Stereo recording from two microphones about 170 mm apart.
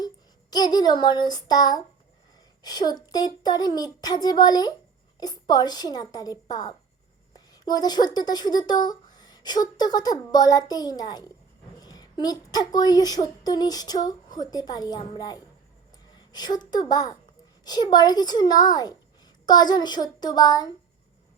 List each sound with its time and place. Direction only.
0.5 s speech: 25° left (ahead or behind)